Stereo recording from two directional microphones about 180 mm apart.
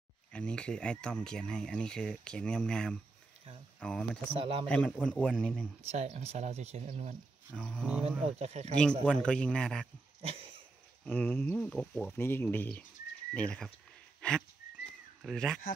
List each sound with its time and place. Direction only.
0.3 s speech: 5° left (ahead or behind)
4.3 s speech: 30° right (ahead or behind)
4.6 s speech: 5° left (ahead or behind)
5.8 s speech: 35° right (ahead or behind)
7.5 s speech: 5° left (ahead or behind)
8.2 s speech: 35° right (ahead or behind)
9.0 s speech: 5° left (ahead or behind)
11.1 s speech: 10° left (ahead or behind)
14.2 s a sound: 5° left (ahead or behind)
15.2 s speech: 5° left (ahead or behind)